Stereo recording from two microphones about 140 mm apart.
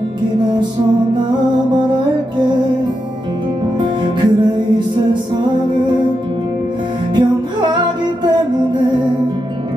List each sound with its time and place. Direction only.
3.8 s music: 35° right (ahead or behind)
7.2 s music: 35° right (ahead or behind)